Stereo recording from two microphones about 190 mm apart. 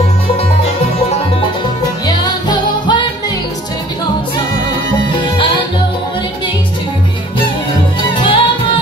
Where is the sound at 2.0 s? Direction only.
25° left (ahead or behind).